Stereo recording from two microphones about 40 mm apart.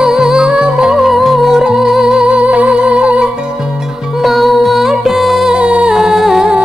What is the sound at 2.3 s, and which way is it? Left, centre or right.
Music, right.